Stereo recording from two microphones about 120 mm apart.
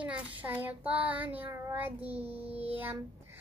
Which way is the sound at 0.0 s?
10° right (ahead or behind).